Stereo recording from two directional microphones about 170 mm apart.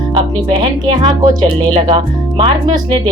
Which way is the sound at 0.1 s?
25° right (ahead or behind).